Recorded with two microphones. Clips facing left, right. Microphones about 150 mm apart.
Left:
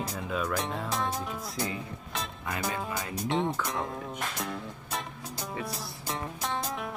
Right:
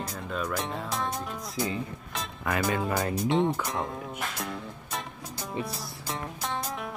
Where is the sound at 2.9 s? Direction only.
45° right (ahead or behind).